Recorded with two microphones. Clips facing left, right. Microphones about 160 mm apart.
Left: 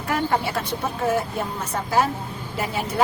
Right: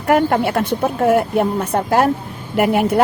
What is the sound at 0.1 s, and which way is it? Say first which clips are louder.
A woman's voice: right 8 dB; 60° right (ahead or behind).